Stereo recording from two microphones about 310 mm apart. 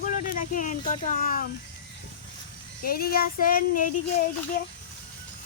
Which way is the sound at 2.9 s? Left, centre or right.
Left.